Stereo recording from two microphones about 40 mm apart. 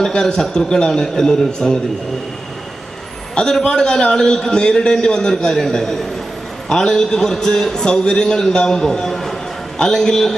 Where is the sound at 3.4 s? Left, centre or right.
Centre.